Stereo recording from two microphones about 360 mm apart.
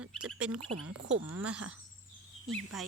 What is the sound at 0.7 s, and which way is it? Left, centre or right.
Speech, right.